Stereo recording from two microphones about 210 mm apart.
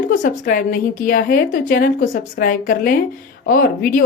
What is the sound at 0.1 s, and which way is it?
A woman's voice, 40° left (ahead or behind).